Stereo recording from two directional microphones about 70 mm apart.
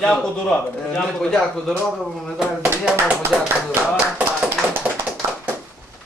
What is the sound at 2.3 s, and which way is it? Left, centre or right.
Speech, centre.